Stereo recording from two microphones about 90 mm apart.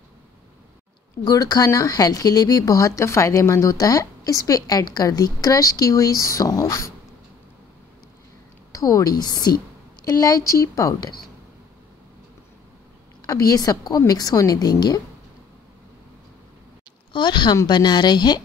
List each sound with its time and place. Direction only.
1.2 s speech: 45° left (ahead or behind)
8.7 s a woman's voice: 40° left (ahead or behind)
13.3 s a woman's voice: 40° left (ahead or behind)
17.1 s a woman's voice: 60° left (ahead or behind)